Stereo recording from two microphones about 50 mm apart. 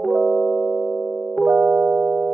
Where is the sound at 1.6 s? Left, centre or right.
Centre.